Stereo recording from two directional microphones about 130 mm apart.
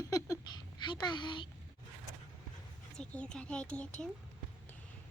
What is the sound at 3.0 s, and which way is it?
Speech, 5° left (ahead or behind).